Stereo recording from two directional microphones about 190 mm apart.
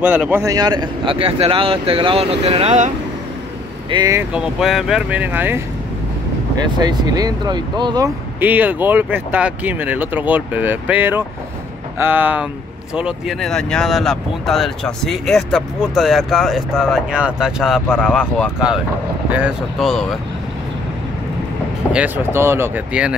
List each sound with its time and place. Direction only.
0.0 s speech: 10° right (ahead or behind); by 2.9 s 35° right (ahead or behind)
3.9 s speech: 15° right (ahead or behind)
6.8 s speech: 20° right (ahead or behind)
8.4 s speech: 10° right (ahead or behind)
19.3 s speech: 5° right (ahead or behind)
21.9 s speech: 10° right (ahead or behind)